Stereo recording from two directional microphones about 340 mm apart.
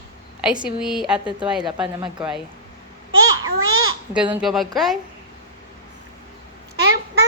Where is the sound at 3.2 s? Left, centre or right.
Right.